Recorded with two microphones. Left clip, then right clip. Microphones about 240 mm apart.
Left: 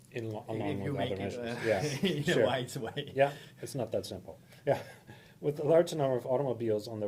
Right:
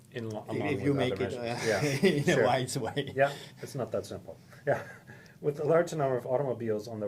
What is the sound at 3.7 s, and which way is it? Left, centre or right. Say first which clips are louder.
Speech: right 1 dB; left.